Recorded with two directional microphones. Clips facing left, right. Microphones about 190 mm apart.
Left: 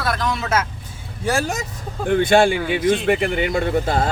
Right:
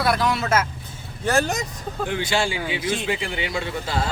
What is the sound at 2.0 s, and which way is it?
A man's voice, 55° left (ahead or behind).